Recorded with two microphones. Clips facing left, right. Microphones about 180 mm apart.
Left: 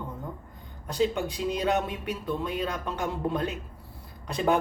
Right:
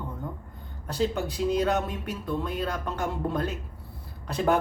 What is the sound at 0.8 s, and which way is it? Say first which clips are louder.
Speech: left 1 dB; 15° left (ahead or behind).